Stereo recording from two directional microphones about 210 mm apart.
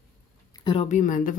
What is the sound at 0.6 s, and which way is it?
Speech, 25° left (ahead or behind).